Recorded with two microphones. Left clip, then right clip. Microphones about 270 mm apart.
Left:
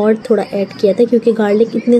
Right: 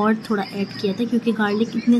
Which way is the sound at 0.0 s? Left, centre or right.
Centre.